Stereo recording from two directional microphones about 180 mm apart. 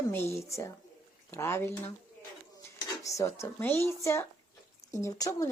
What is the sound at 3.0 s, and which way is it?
Speech, 15° left (ahead or behind).